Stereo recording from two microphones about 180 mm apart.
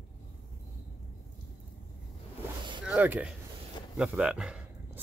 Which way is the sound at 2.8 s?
10° right (ahead or behind).